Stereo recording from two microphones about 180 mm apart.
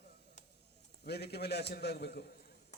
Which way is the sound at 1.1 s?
65° left (ahead or behind).